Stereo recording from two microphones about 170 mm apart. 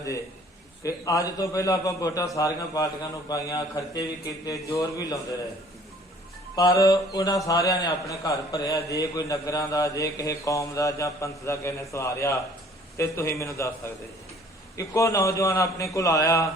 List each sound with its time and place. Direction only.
0.8 s a man's voice: 20° left (ahead or behind)
6.6 s a man's voice: 20° left (ahead or behind)
14.8 s a man's voice: 20° left (ahead or behind)